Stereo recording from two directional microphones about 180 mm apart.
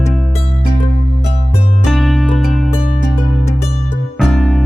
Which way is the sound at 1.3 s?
35° left (ahead or behind).